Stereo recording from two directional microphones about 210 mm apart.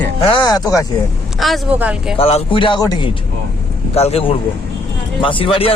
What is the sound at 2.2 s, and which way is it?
Speech, 30° left (ahead or behind).